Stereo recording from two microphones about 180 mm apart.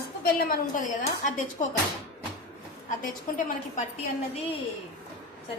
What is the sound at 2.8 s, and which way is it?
Speech, 50° left (ahead or behind).